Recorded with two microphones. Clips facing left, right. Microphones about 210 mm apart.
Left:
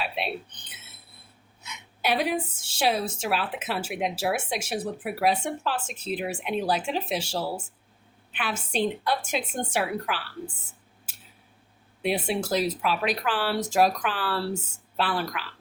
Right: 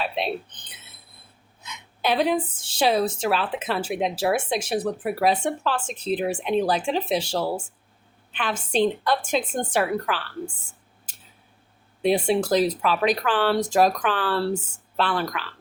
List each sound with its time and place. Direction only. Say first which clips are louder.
0.0 s speech: right 4 dB; 40° right (ahead or behind)
1.6 s a woman's voice: right 3 dB; 10° left (ahead or behind)
12.3 s a woman's voice: right 5 dB; 5° left (ahead or behind)